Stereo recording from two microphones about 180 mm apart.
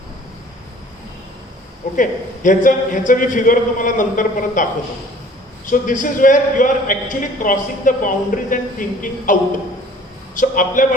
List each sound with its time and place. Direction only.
2.0 s a man's voice: 45° left (ahead or behind)
5.8 s a man's voice: 45° left (ahead or behind)